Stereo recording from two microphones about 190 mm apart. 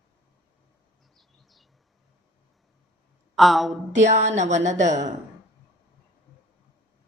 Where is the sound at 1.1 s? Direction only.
Centre (ahead or behind).